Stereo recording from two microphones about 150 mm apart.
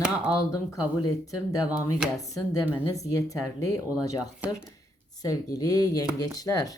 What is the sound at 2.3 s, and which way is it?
Speech, 20° left (ahead or behind).